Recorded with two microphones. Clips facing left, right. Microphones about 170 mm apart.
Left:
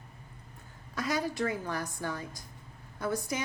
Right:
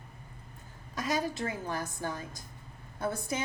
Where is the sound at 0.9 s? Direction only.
20° right (ahead or behind).